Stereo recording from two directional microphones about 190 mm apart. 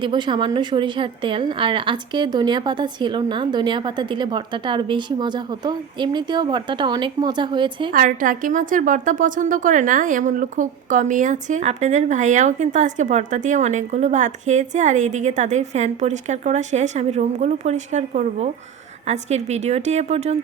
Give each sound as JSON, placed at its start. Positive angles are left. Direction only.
{"t": 0.0, "sound": "a woman's voice", "side_deg": -25}
{"t": 7.9, "sound": "a woman's voice", "side_deg": -45}